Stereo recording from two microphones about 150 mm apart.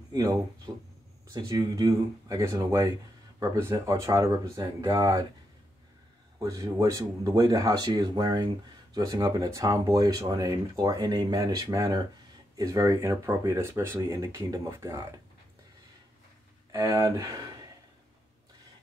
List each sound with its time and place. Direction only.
0.1 s speech: 25° right (ahead or behind)
6.4 s speech: 25° right (ahead or behind)
16.7 s speech: 15° right (ahead or behind)